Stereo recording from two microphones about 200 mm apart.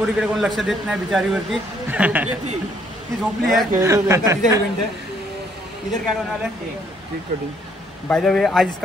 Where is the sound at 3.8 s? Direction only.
15° right (ahead or behind).